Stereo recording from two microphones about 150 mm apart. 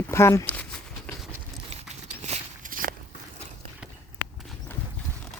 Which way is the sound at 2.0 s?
50° right (ahead or behind).